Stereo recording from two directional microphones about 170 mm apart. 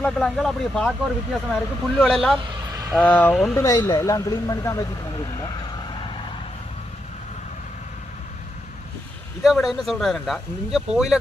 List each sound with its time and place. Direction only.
0.0 s speech: 5° left (ahead or behind)
2.5 s vehicle: 20° right (ahead or behind)
3.0 s speech: 10° left (ahead or behind)
9.4 s speech: centre (ahead or behind)